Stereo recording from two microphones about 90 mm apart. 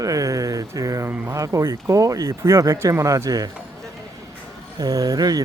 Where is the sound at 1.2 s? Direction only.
40° right (ahead or behind).